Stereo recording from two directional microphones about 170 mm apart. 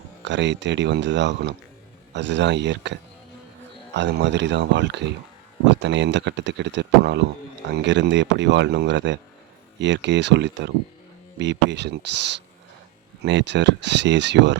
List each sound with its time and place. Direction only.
0.3 s speech: 90° right